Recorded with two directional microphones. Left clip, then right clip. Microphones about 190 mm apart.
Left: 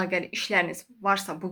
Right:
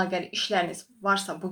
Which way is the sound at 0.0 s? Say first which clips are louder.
Even; 40° left (ahead or behind).